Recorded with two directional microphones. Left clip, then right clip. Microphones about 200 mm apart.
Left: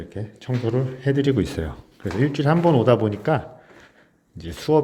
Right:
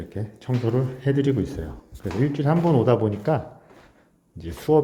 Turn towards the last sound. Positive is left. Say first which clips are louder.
# even
turn(degrees=0)  # may be behind; listen again after turning